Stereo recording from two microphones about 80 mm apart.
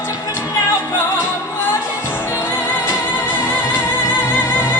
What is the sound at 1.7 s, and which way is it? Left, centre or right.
Music, left.